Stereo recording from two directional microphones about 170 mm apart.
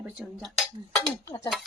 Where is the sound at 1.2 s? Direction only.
20° left (ahead or behind).